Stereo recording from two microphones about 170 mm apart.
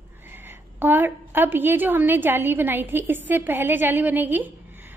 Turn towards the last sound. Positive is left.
turn(degrees=-10)  # may be behind; listen again after turning